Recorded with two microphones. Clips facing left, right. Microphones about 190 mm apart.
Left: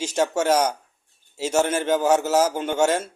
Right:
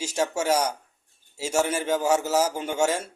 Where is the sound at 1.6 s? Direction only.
55° left (ahead or behind).